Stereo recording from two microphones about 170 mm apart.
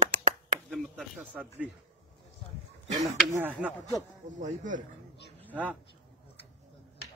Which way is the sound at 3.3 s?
10° right (ahead or behind).